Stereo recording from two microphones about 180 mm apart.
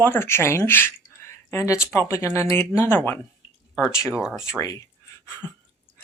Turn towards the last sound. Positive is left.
turn(degrees=20)  # may be behind; listen again after turning